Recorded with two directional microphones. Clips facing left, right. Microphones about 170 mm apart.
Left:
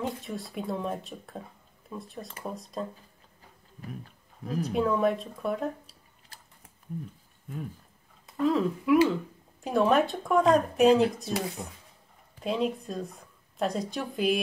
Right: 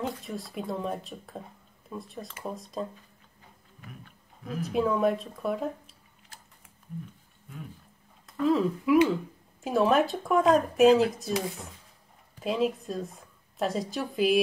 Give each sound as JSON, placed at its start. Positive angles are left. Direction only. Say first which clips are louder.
{"t": 0.0, "sound": "speech", "louder": "even", "side_deg": 0}
{"t": 3.8, "sound": "speech", "louder": "left 7 dB", "side_deg": 35}
{"t": 4.6, "sound": "speech", "louder": "right 1 dB", "side_deg": 0}
{"t": 8.4, "sound": "a woman's voice", "louder": "right 1 dB", "side_deg": 0}